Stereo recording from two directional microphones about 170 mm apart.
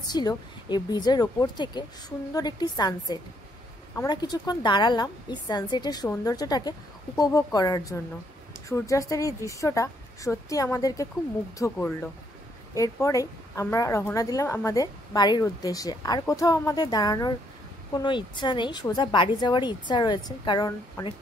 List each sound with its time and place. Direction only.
0.1 s a woman's voice: 25° left (ahead or behind)